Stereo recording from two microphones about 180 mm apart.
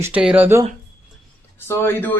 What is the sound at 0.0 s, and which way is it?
Speech, 5° right (ahead or behind).